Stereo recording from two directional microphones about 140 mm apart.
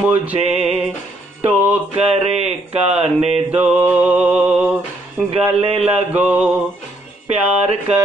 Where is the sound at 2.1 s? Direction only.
50° right (ahead or behind).